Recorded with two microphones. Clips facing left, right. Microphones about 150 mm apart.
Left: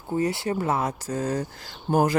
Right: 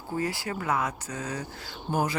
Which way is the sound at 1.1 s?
50° left (ahead or behind).